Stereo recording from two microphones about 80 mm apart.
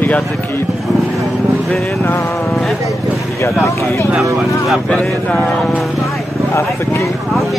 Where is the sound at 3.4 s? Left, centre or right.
Left.